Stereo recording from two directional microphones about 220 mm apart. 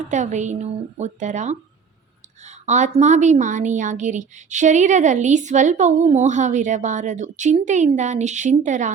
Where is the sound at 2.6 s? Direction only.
30° right (ahead or behind).